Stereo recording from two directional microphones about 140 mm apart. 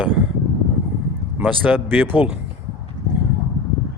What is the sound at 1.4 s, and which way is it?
Speech, 10° right (ahead or behind).